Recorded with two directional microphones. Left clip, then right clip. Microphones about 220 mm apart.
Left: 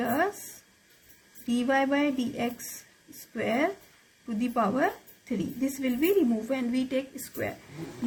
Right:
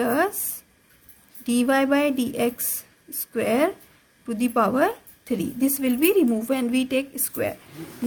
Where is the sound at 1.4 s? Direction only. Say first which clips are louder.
Right 5 dB; 40° right (ahead or behind).